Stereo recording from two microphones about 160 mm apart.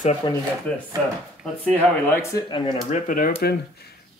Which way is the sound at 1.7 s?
15° left (ahead or behind).